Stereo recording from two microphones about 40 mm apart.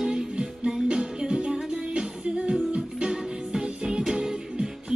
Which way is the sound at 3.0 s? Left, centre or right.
Centre.